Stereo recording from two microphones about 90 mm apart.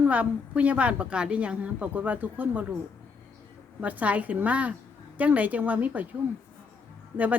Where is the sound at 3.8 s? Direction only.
15° right (ahead or behind).